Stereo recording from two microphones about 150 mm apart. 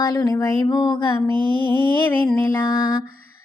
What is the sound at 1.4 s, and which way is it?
Mantra, 35° right (ahead or behind).